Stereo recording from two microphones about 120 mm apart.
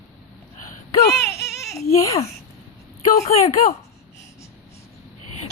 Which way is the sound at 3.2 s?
65° left (ahead or behind).